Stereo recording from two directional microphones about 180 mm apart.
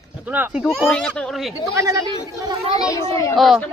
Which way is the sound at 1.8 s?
15° right (ahead or behind).